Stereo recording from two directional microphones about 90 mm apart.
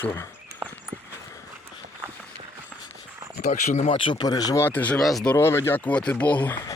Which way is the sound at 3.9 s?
75° left (ahead or behind).